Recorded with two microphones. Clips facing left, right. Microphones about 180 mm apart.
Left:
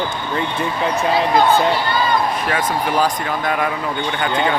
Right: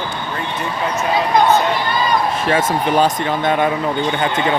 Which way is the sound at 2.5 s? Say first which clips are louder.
Right 5 dB; 25° right (ahead or behind).